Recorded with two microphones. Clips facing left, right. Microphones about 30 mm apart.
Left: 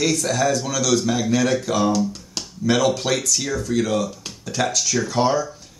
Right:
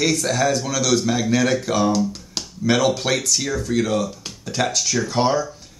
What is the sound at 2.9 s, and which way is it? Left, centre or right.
Speech, right.